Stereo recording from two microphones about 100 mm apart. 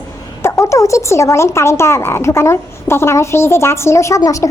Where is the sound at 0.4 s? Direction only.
30° left (ahead or behind).